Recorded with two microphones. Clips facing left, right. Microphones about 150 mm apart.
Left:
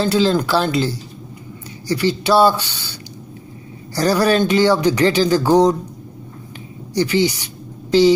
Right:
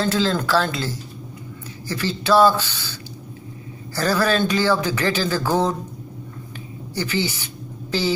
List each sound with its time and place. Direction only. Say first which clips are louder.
0.0 s speech: left 5 dB; 15° left (ahead or behind)
1.9 s speech: left 4 dB; 15° left (ahead or behind)
6.9 s speech: left 7 dB; 15° left (ahead or behind)